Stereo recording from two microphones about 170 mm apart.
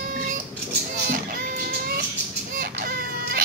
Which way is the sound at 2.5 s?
60° right (ahead or behind).